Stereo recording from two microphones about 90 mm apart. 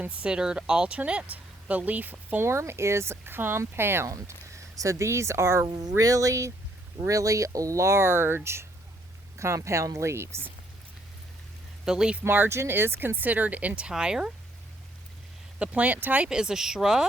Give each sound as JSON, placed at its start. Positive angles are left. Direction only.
{"t": 0.0, "sound": "speech", "side_deg": -15}
{"t": 2.5, "sound": "speech", "side_deg": -30}
{"t": 5.6, "sound": "speech", "side_deg": -45}
{"t": 9.4, "sound": "speech", "side_deg": -30}
{"t": 11.9, "sound": "speech", "side_deg": -10}
{"t": 12.2, "sound": "speech", "side_deg": -25}
{"t": 15.5, "sound": "speech", "side_deg": -15}